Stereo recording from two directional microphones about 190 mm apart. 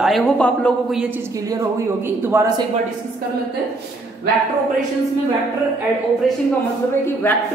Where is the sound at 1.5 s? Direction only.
15° right (ahead or behind).